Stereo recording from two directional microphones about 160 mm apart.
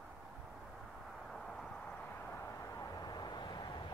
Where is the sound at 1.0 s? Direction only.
Centre (ahead or behind).